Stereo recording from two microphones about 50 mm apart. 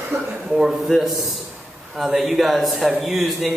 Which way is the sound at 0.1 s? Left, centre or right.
Right.